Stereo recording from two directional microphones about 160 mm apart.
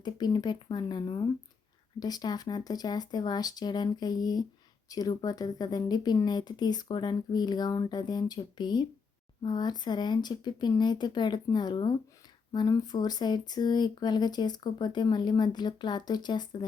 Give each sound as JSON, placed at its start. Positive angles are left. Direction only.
{"t": 0.0, "sound": "speech", "side_deg": 25}